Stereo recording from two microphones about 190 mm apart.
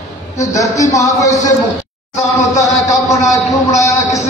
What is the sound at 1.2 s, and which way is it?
Speech, 40° left (ahead or behind).